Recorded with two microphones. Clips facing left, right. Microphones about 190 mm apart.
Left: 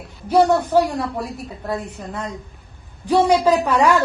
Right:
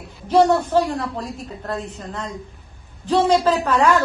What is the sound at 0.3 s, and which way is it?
A man's voice, 10° left (ahead or behind).